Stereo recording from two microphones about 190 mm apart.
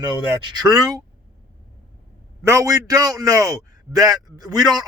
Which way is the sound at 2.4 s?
15° right (ahead or behind).